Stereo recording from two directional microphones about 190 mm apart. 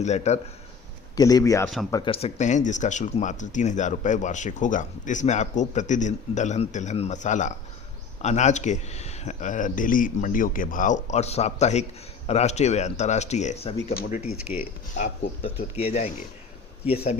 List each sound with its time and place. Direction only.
0.0 s speech: 35° left (ahead or behind)
1.1 s a man's voice: 20° left (ahead or behind)
1.6 s speech: centre (ahead or behind)
1.9 s speech: 25° left (ahead or behind)
14.2 s speech: 5° right (ahead or behind)
14.9 s speech: 40° left (ahead or behind)